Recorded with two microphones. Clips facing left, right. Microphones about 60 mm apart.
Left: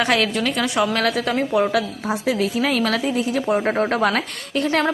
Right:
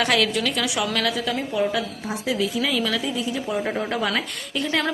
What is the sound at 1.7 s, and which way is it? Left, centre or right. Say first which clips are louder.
A woman's voice: left 5 dB; left.